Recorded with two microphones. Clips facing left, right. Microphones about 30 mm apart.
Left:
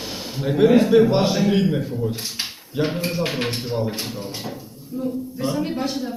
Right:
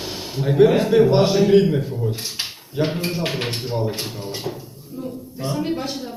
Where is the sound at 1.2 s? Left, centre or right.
Centre.